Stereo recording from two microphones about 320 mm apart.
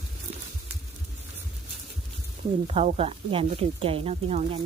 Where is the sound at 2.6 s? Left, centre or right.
Centre.